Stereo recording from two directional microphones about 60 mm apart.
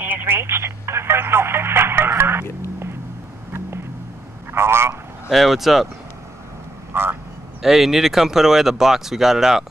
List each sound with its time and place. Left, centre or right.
0.1 s telephone: right
4.5 s a man's voice: right
5.3 s speech: centre
6.9 s vehicle: right
7.6 s speech: centre